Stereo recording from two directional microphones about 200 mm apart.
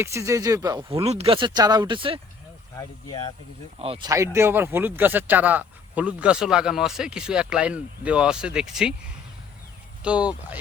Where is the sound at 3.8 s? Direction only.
30° right (ahead or behind).